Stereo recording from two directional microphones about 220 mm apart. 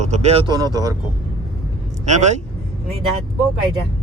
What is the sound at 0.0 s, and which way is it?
Speech, 30° right (ahead or behind).